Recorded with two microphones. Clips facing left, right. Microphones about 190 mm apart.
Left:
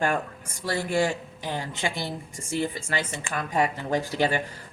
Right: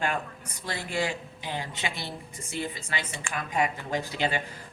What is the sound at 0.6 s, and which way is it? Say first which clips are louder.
Speech: left 6 dB; 45° left (ahead or behind).